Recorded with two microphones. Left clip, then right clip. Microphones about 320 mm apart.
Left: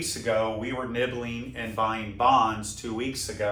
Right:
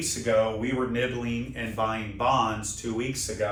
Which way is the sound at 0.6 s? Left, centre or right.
Centre.